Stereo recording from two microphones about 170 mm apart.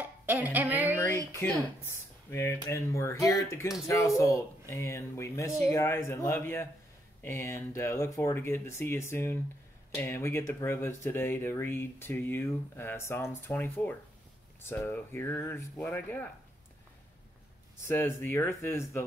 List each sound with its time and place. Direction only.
0.0 s a sound: 10° right (ahead or behind)
1.1 s speech: 20° right (ahead or behind)
1.4 s speech: 15° left (ahead or behind)
17.8 s speech: 15° left (ahead or behind)